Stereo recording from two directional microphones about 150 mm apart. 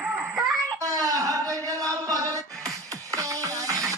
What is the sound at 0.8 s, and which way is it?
Music, 20° right (ahead or behind).